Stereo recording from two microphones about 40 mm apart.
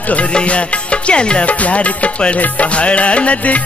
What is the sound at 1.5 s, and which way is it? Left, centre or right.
Speech, left.